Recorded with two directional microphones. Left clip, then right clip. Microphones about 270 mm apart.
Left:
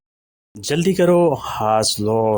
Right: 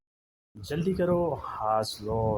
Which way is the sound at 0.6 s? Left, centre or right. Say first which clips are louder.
Left 11 dB; left.